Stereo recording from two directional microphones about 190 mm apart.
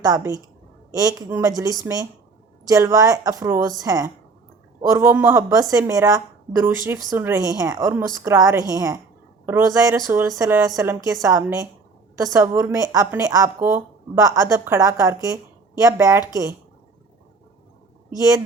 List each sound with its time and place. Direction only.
0.0 s speech: 20° right (ahead or behind)